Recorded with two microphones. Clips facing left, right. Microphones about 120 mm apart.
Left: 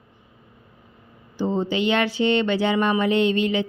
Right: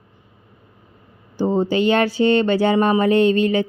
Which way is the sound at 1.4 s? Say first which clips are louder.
Right 5 dB; 45° right (ahead or behind).